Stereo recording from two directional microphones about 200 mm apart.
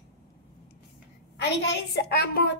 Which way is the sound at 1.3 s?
60° left (ahead or behind).